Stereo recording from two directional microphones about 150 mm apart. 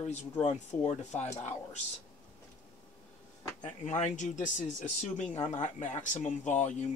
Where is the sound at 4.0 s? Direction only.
55° left (ahead or behind).